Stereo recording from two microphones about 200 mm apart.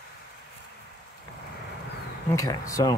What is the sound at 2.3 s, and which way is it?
Speech, 15° left (ahead or behind).